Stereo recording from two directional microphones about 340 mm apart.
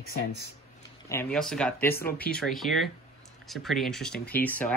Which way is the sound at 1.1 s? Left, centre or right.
Centre.